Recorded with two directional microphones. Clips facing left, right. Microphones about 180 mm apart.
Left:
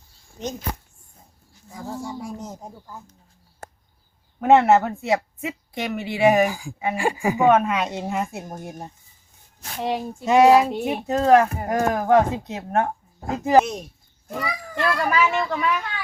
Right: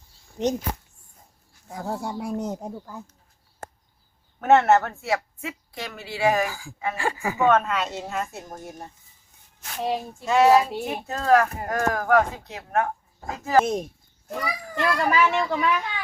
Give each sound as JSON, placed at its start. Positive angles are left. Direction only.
{"t": 0.4, "sound": "speech", "side_deg": -75}
{"t": 1.7, "sound": "speech", "side_deg": -65}
{"t": 4.4, "sound": "speech", "side_deg": 15}
{"t": 9.8, "sound": "a child's voice", "side_deg": 0}
{"t": 10.2, "sound": "speech", "side_deg": 15}
{"t": 13.7, "sound": "speech", "side_deg": -50}
{"t": 14.4, "sound": "a child's voice", "side_deg": 0}